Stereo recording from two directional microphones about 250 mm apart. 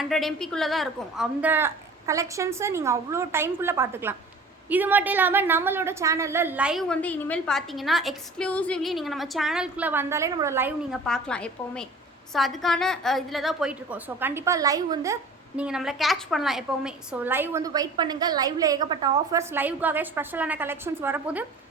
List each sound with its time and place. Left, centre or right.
0.0 s a woman's voice: centre
11.0 s a woman's voice: centre